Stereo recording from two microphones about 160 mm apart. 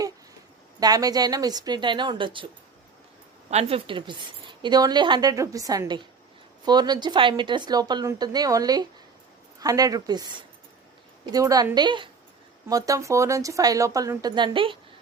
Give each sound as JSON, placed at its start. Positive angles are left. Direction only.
{"t": 0.8, "sound": "speech", "side_deg": -25}
{"t": 3.5, "sound": "speech", "side_deg": -40}